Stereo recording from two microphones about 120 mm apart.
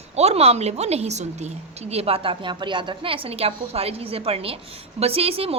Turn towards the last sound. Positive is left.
turn(degrees=-55)  # may be behind; listen again after turning